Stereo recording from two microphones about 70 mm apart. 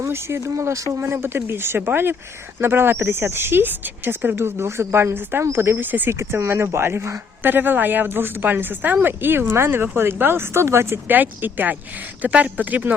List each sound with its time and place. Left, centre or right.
0.0 s speech: right
1.0 s speech: right
7.5 s speech: right
11.1 s speech: right